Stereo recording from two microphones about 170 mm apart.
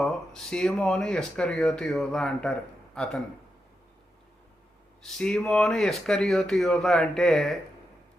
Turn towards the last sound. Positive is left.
turn(degrees=0)  # may be behind; listen again after turning